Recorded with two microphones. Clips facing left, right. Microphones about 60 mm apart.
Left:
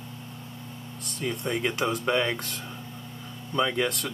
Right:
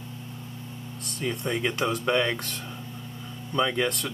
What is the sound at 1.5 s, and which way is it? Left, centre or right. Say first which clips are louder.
Speech: even; centre.